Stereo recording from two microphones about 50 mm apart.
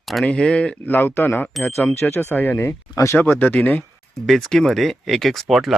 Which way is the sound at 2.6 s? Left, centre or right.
Left.